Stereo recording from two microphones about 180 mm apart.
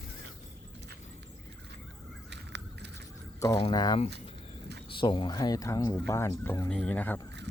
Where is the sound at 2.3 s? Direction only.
70° right (ahead or behind).